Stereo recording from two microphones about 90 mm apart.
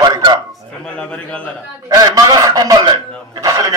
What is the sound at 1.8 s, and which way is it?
Speech, 45° right (ahead or behind).